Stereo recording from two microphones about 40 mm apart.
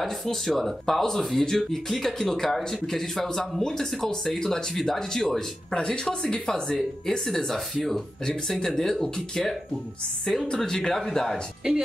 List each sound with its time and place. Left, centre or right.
0.0 s speech: centre
5.7 s speech: left
10.6 s speech: centre
11.6 s speech: centre